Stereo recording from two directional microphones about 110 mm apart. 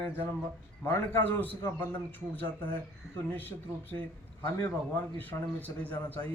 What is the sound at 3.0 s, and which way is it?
Speech, 5° right (ahead or behind).